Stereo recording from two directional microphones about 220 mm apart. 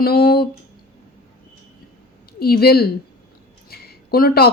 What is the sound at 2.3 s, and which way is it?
A woman's voice, 45° left (ahead or behind).